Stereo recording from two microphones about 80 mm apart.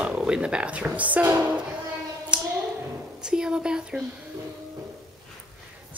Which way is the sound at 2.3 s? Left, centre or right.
Centre.